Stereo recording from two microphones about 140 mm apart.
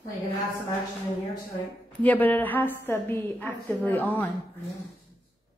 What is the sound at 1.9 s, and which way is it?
A woman's voice, 10° left (ahead or behind).